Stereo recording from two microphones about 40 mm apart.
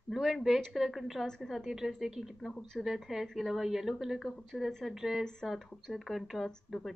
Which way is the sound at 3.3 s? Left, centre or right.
Centre.